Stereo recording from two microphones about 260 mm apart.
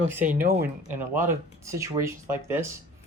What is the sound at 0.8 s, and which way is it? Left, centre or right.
A man's voice, centre.